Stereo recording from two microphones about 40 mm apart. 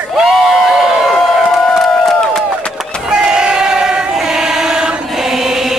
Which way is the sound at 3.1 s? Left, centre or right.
Centre.